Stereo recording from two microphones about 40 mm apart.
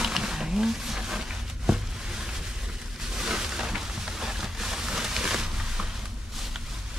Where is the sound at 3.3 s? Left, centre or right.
Centre.